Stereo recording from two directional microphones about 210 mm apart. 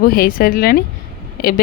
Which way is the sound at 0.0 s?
45° left (ahead or behind).